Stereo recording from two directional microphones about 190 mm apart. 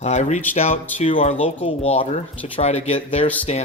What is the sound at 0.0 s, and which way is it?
Speech, 35° left (ahead or behind).